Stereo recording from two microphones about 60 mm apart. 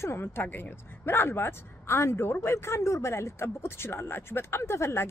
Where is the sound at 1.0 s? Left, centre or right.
Left.